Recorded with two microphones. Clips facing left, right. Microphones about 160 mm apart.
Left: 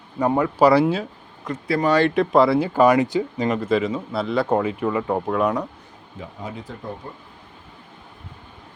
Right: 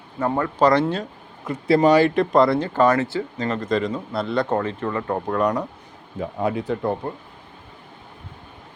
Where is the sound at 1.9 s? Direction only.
5° right (ahead or behind).